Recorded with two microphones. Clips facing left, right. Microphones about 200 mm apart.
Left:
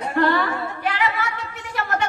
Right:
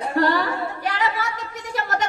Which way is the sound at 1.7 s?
40° right (ahead or behind).